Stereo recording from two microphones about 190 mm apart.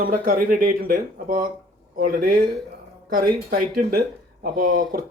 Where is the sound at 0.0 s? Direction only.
50° right (ahead or behind).